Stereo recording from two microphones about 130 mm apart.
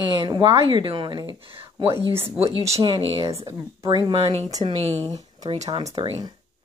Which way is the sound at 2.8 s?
45° right (ahead or behind).